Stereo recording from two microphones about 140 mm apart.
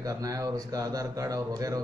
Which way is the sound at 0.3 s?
25° right (ahead or behind).